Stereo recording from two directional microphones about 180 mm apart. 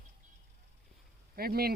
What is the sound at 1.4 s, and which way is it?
Speech, 55° right (ahead or behind).